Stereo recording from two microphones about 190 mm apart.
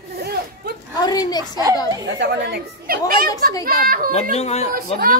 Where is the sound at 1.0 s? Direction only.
20° left (ahead or behind).